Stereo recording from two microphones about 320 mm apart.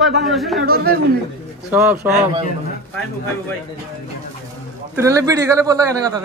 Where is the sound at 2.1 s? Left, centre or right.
Centre.